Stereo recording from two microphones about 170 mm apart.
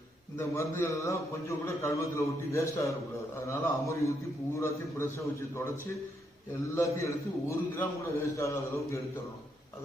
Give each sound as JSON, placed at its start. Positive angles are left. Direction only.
{"t": 0.3, "sound": "a man's voice", "side_deg": 15}